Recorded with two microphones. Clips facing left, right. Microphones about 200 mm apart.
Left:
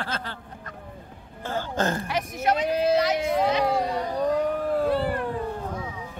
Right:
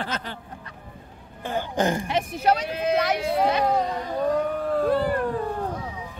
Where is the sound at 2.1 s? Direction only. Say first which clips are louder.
Right 3 dB; 30° right (ahead or behind).